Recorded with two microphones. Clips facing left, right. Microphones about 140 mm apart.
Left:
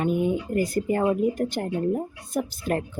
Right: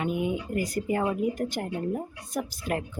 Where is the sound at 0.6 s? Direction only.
25° left (ahead or behind).